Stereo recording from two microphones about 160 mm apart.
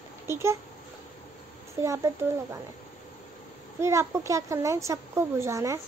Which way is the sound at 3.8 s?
20° right (ahead or behind).